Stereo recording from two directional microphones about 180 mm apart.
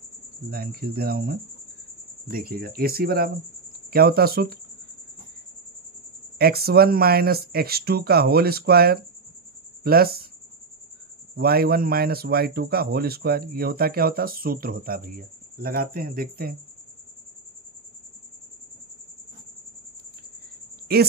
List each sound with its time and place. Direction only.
0.5 s a man's voice: 60° right (ahead or behind)
6.3 s a man's voice: 60° right (ahead or behind)
11.3 s a man's voice: 60° right (ahead or behind)